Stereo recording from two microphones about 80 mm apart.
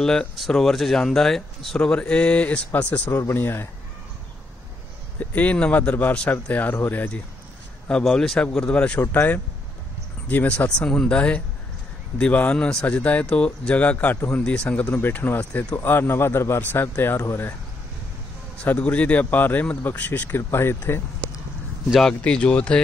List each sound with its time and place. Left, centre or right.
0.0 s speech: centre; by 3.6 s left
5.2 s speech: centre
7.9 s speech: centre; by 17.6 s left
18.6 s speech: centre
22.2 s speech: centre